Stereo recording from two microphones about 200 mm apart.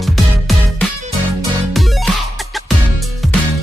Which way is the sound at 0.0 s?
Centre (ahead or behind).